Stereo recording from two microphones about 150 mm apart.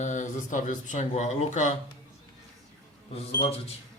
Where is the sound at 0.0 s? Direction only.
55° left (ahead or behind).